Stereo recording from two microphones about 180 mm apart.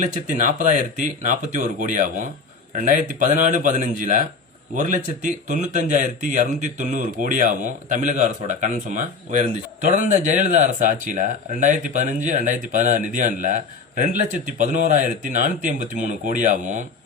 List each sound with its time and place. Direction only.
0.0 s speech: 45° right (ahead or behind)